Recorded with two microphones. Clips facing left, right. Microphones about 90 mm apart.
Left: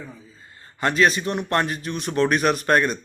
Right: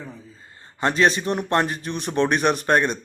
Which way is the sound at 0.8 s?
30° right (ahead or behind).